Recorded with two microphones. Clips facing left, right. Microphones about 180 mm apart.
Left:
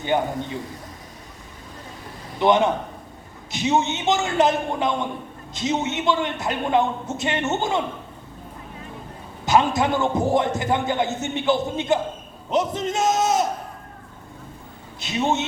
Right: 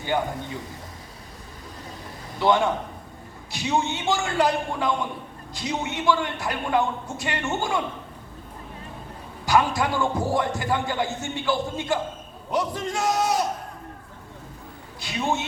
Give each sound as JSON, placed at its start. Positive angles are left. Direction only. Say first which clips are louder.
{"t": 0.1, "sound": "speech", "louder": "left 3 dB", "side_deg": 20}
{"t": 2.4, "sound": "speech", "louder": "left 3 dB", "side_deg": 20}
{"t": 9.5, "sound": "speech", "louder": "left 3 dB", "side_deg": 20}
{"t": 15.0, "sound": "speech", "louder": "left 4 dB", "side_deg": 20}